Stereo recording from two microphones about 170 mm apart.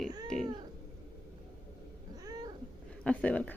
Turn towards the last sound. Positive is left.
turn(degrees=10)  # may be behind; listen again after turning